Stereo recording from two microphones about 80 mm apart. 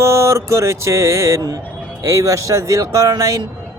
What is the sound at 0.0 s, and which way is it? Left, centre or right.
Speech, right.